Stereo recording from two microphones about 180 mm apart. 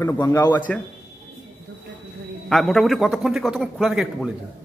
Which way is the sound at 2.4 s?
Centre (ahead or behind).